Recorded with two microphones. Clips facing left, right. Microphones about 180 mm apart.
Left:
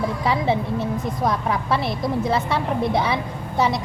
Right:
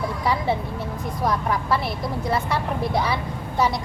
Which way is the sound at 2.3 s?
25° left (ahead or behind).